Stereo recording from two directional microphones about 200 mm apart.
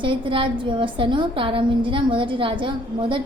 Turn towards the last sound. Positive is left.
turn(degrees=-25)  # may be behind; listen again after turning